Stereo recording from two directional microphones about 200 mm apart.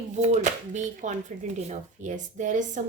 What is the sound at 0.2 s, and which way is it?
A woman's voice, 35° right (ahead or behind).